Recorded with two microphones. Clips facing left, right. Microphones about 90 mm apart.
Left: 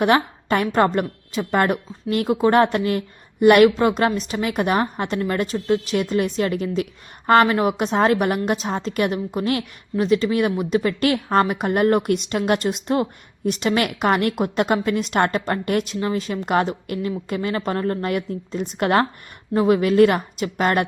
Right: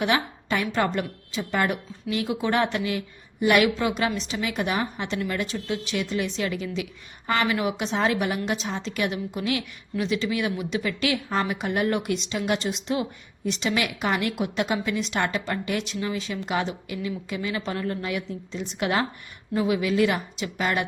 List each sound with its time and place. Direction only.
0.0 s speech: 50° left (ahead or behind)